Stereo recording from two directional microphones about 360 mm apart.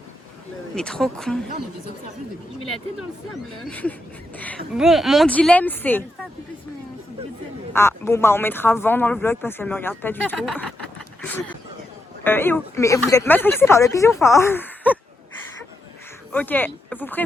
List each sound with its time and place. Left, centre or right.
0.8 s speech: centre
3.7 s speech: centre
7.7 s speech: centre
12.2 s speech: centre
16.3 s speech: centre